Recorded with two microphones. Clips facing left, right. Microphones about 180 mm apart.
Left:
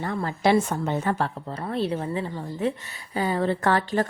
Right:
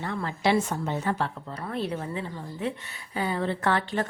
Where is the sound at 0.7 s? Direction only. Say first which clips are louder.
Left 3 dB; 55° left (ahead or behind).